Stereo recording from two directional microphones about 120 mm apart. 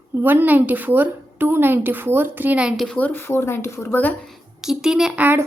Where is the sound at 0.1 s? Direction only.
15° right (ahead or behind).